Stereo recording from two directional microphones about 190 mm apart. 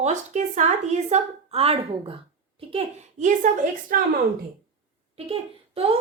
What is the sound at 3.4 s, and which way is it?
Speech, 40° right (ahead or behind).